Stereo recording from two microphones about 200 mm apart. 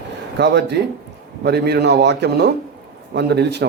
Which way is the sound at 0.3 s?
55° right (ahead or behind).